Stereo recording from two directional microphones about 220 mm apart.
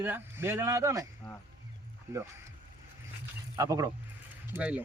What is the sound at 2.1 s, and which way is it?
Speech, 15° right (ahead or behind).